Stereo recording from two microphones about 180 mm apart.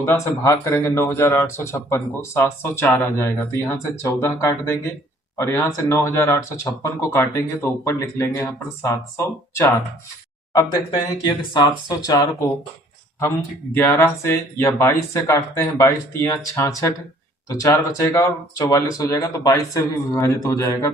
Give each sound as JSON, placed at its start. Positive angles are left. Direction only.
{"t": 0.0, "sound": "speech", "side_deg": 15}
{"t": 13.7, "sound": "speech", "side_deg": 15}